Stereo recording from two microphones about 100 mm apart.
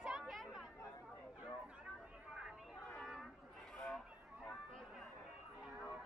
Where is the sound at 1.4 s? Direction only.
10° right (ahead or behind).